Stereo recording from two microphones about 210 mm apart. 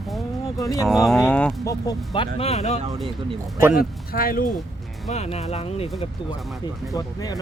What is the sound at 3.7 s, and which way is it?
Speech, 45° left (ahead or behind).